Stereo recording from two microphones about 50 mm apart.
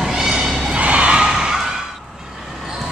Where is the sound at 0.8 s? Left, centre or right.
Right.